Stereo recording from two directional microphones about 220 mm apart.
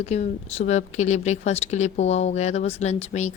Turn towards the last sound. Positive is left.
turn(degrees=30)  # may be behind; listen again after turning